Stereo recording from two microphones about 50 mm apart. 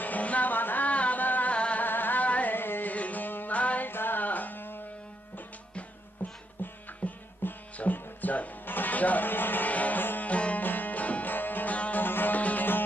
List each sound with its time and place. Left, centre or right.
0.0 s music: left
1.8 s carnatic music: left
2.9 s music: left
3.8 s music: left
6.2 s music: left
10.2 s music: left
10.6 s music: left
12.0 s music: left